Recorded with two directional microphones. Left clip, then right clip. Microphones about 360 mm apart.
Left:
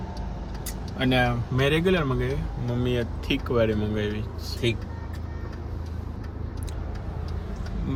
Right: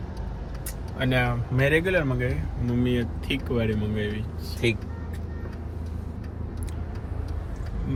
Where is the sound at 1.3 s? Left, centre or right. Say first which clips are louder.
Right 1 dB; centre.